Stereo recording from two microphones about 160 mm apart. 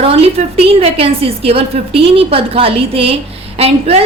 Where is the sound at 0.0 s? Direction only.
40° right (ahead or behind).